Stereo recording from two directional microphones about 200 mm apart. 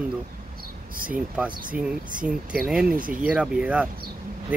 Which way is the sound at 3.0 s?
45° right (ahead or behind).